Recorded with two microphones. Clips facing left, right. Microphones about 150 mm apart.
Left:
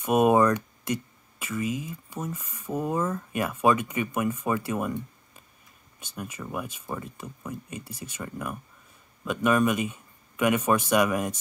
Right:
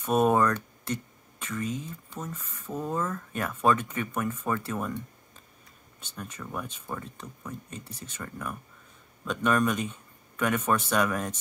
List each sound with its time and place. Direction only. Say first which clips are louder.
0.0 s speech: left 3 dB; 15° left (ahead or behind)